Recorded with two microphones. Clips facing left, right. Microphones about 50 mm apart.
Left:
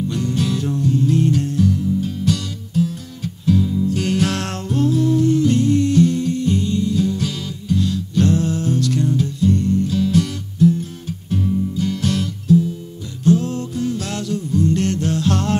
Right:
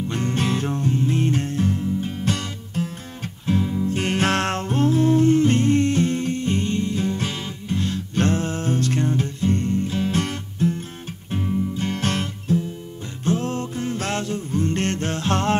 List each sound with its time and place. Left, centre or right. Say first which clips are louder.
0.1 s music: left 2 dB; right